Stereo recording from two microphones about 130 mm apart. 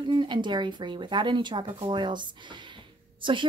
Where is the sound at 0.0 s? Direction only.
35° right (ahead or behind).